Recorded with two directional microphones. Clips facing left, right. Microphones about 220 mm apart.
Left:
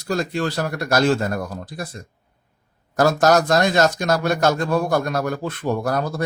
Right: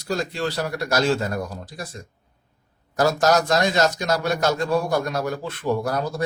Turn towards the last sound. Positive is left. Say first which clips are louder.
# left 2 dB
turn(degrees=55)  # may be behind; listen again after turning